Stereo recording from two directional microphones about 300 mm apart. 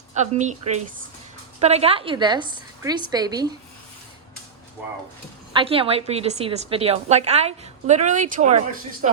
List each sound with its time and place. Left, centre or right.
0.1 s a woman's voice: right
5.5 s a woman's voice: centre